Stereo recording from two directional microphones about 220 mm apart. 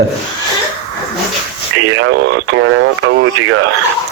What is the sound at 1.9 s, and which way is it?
Speech, 60° right (ahead or behind).